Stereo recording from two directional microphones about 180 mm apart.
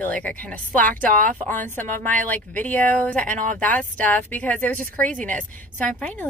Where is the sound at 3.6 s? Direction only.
10° left (ahead or behind).